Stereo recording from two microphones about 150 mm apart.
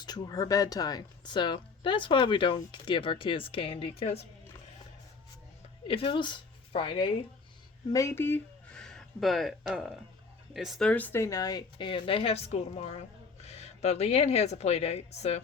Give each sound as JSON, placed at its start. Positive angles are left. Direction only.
{"t": 0.0, "sound": "speech", "side_deg": 25}
{"t": 5.9, "sound": "a woman's voice", "side_deg": 35}
{"t": 7.9, "sound": "a woman's voice", "side_deg": 20}